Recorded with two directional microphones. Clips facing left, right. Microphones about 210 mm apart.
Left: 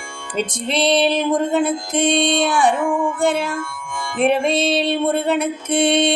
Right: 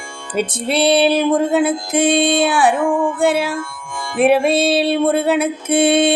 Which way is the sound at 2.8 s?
35° right (ahead or behind).